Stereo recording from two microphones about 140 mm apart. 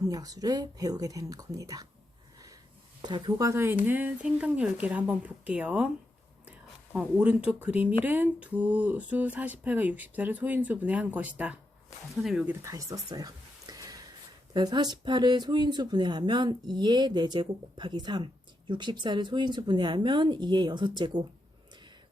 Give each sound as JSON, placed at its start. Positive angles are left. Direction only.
{"t": 0.0, "sound": "speech", "side_deg": -25}
{"t": 3.0, "sound": "speech", "side_deg": -30}
{"t": 6.9, "sound": "speech", "side_deg": -10}
{"t": 12.6, "sound": "a sound", "side_deg": -25}
{"t": 14.5, "sound": "speech", "side_deg": -30}